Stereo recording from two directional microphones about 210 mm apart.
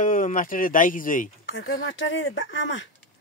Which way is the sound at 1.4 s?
60° left (ahead or behind).